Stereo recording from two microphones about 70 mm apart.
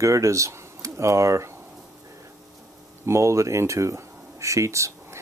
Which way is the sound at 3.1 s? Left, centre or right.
Right.